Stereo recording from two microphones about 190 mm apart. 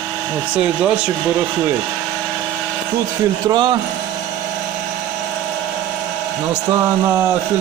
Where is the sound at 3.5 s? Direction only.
25° right (ahead or behind).